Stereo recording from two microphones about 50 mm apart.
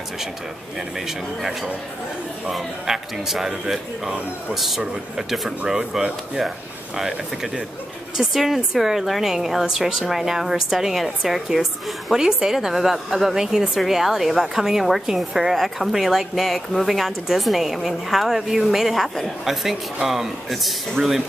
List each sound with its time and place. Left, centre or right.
0.7 s a woman's voice: centre